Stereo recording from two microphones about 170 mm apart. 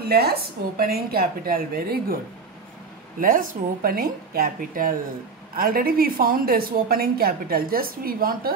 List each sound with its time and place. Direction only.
0.1 s a woman's voice: 65° right (ahead or behind)
3.2 s a woman's voice: 55° right (ahead or behind)